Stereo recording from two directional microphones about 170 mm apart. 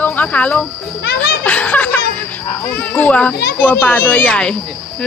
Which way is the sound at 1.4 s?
10° left (ahead or behind).